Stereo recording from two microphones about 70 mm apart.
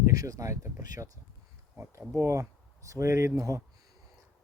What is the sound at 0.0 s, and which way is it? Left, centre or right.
Speech, right.